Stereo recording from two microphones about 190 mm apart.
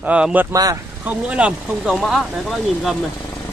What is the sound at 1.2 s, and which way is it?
Speech, 5° right (ahead or behind).